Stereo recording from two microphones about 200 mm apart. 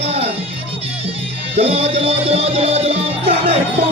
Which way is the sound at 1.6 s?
30° right (ahead or behind).